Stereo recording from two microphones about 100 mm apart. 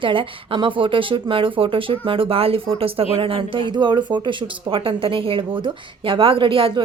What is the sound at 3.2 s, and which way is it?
Speech, 60° right (ahead or behind).